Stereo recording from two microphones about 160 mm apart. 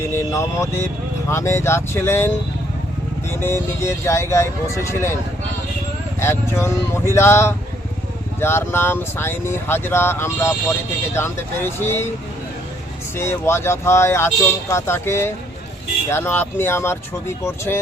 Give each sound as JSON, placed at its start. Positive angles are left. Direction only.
{"t": 0.0, "sound": "vehicle", "side_deg": 15}
{"t": 1.3, "sound": "speech", "side_deg": 15}
{"t": 6.1, "sound": "speech", "side_deg": 15}
{"t": 13.1, "sound": "speech", "side_deg": 15}